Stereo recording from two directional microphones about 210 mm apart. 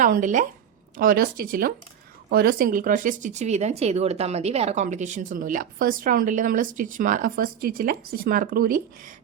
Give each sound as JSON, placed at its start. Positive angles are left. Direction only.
{"t": 0.0, "sound": "speech", "side_deg": -40}